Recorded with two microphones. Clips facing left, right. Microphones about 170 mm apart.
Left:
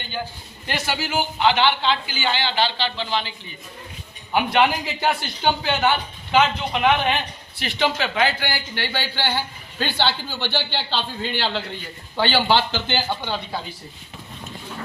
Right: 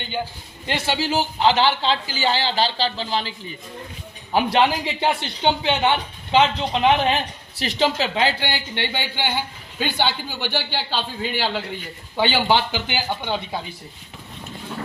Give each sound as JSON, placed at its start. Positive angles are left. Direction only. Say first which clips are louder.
{"t": 0.7, "sound": "a man's voice", "louder": "right 3 dB", "side_deg": -25}
{"t": 4.4, "sound": "a man's voice", "louder": "right 1 dB", "side_deg": -30}